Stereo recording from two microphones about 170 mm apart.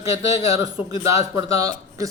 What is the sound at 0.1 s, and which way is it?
A man's voice, 20° right (ahead or behind).